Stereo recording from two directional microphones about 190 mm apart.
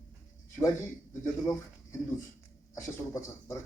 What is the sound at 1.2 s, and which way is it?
Speech, 15° left (ahead or behind).